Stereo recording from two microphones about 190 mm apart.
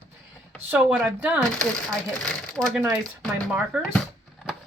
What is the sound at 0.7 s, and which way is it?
Speech, 10° right (ahead or behind).